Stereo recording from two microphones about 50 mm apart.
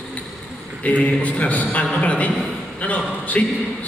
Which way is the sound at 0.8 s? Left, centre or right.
Left.